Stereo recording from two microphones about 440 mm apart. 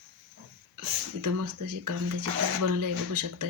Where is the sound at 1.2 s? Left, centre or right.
Right.